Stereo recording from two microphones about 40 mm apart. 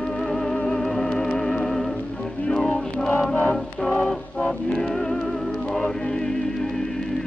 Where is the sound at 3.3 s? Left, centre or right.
Left.